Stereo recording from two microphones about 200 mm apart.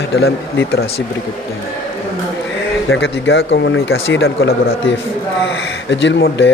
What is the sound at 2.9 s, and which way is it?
Speech, 75° left (ahead or behind).